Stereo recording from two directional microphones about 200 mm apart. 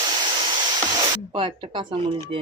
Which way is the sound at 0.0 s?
20° right (ahead or behind).